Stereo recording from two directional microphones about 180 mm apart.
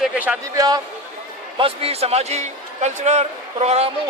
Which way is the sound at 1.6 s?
30° right (ahead or behind).